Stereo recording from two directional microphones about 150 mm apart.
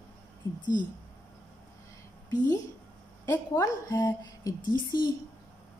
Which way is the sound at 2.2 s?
25° left (ahead or behind).